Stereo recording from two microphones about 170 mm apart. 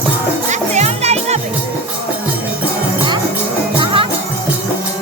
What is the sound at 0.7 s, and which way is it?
Music, 40° right (ahead or behind).